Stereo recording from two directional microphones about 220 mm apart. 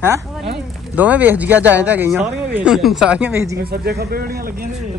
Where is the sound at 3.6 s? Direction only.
45° right (ahead or behind).